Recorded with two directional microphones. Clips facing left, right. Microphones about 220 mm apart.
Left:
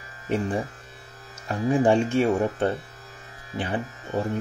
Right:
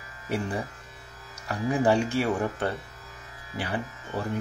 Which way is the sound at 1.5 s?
25° left (ahead or behind).